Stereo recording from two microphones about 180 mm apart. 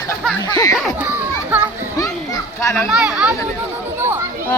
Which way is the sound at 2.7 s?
Centre (ahead or behind).